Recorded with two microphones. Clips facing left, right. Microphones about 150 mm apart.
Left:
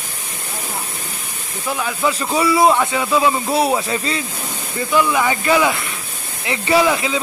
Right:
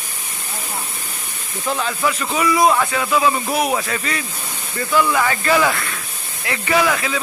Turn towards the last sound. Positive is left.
turn(degrees=20)  # may be behind; listen again after turning